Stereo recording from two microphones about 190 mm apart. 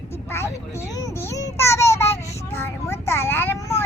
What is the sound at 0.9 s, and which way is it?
Child singing, 20° left (ahead or behind).